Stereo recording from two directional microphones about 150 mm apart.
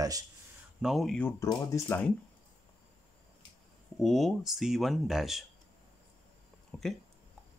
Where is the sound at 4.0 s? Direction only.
Centre (ahead or behind).